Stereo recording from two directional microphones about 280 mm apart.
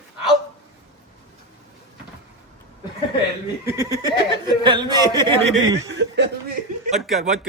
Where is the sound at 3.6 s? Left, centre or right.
Centre.